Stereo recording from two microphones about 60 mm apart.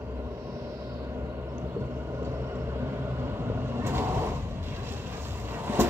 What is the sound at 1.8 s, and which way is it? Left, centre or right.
Vehicle, right.